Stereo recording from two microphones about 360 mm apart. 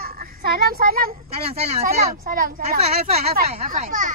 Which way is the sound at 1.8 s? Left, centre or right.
Right.